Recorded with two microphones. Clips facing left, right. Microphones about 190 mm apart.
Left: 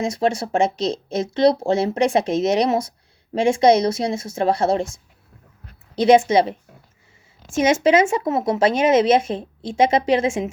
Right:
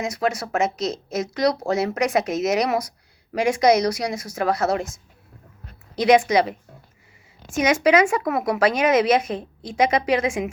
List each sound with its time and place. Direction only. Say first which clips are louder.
0.0 s speech: left 3 dB; 30° left (ahead or behind)
6.0 s speech: left 2 dB; 25° left (ahead or behind)